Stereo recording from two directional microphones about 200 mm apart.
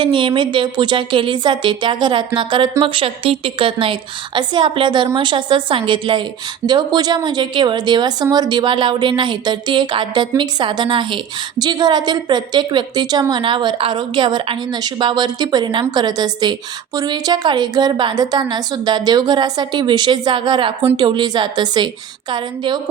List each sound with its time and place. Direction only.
0.0 s a woman's voice: 25° right (ahead or behind)